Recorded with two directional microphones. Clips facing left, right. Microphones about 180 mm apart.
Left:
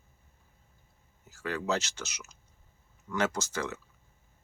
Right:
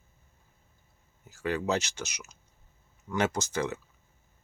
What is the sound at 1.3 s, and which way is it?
Speech, 20° right (ahead or behind).